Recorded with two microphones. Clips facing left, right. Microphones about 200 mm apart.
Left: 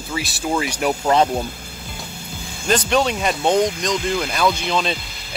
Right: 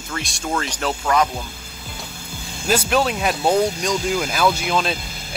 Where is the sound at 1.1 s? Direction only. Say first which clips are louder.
Left 3 dB; 30° left (ahead or behind).